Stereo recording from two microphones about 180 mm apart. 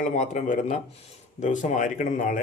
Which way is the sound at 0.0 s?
45° left (ahead or behind).